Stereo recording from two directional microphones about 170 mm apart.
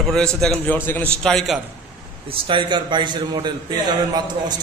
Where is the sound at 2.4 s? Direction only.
30° right (ahead or behind).